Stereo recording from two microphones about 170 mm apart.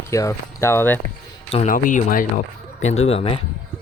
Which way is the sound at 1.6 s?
50° left (ahead or behind).